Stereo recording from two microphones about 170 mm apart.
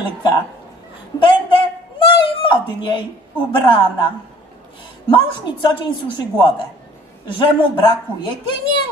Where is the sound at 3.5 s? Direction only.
30° left (ahead or behind).